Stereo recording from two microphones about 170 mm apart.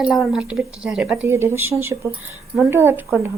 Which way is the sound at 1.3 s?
15° right (ahead or behind).